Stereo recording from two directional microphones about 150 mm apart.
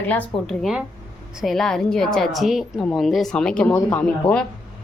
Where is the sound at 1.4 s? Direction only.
Centre (ahead or behind).